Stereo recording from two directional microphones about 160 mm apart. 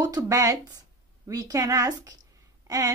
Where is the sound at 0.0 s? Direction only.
20° right (ahead or behind).